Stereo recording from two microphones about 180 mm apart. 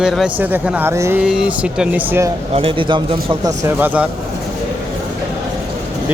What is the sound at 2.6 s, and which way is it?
Speech, 30° right (ahead or behind).